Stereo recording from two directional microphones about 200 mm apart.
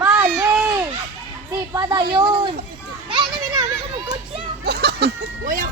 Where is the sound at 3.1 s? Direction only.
25° right (ahead or behind).